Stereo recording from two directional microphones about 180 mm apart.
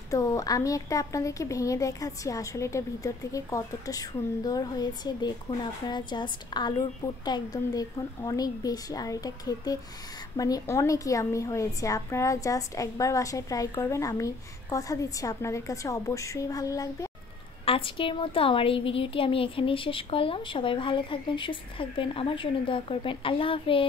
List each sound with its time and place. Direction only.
0.1 s a woman's voice: 20° left (ahead or behind)
17.6 s a woman's voice: 30° left (ahead or behind)